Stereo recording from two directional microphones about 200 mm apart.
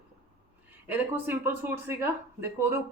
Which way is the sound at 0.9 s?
10° right (ahead or behind).